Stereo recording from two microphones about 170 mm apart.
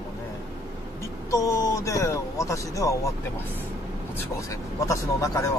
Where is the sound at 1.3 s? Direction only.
20° left (ahead or behind).